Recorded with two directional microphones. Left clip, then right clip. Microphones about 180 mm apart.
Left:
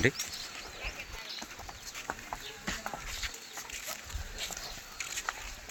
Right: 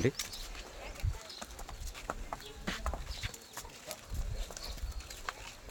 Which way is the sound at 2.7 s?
10° left (ahead or behind).